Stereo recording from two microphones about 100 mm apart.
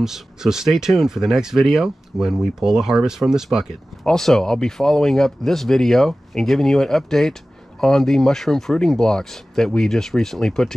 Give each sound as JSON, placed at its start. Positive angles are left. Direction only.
{"t": 0.0, "sound": "speech", "side_deg": -5}